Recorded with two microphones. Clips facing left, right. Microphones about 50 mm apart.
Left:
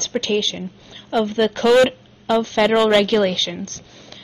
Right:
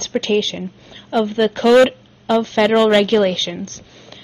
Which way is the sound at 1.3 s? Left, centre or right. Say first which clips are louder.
Right 2 dB; centre.